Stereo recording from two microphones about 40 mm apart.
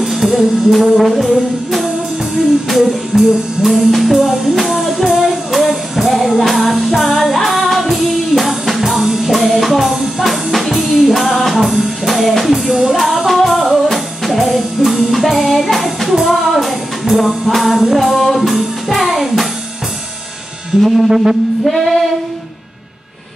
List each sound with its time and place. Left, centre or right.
0.0 s music: centre
12.7 s music: centre
13.3 s music: centre
20.7 s music: centre
21.1 s a sound: centre
21.6 s female singing: centre